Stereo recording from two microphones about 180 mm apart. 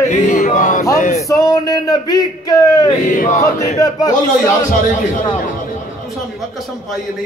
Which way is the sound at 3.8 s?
20° left (ahead or behind).